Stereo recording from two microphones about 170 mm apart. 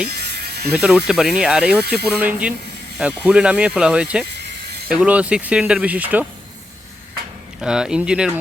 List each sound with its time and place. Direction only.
0.1 s music: 70° right (ahead or behind)
0.7 s speech: 5° right (ahead or behind)
7.6 s speech: 5° right (ahead or behind)